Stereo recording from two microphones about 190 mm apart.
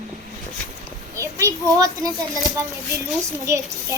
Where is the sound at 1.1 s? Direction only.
15° right (ahead or behind).